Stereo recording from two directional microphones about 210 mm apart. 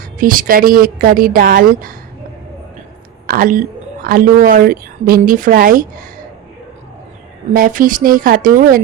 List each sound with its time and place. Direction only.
0.2 s a woman's voice: 40° right (ahead or behind)
3.2 s a woman's voice: 40° right (ahead or behind)
7.5 s speech: 40° right (ahead or behind)